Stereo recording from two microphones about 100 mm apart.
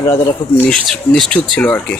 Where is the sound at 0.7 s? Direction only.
5° left (ahead or behind).